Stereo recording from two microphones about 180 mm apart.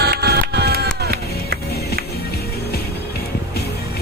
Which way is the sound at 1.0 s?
60° right (ahead or behind).